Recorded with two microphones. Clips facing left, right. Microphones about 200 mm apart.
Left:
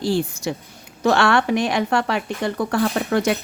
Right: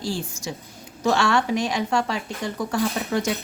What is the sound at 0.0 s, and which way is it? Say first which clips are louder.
Speech: left 7 dB; 60° left (ahead or behind).